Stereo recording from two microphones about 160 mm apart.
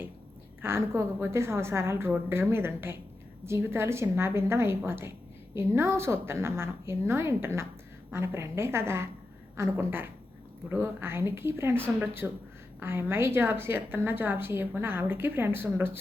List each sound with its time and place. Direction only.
0.6 s a woman's voice: 15° right (ahead or behind)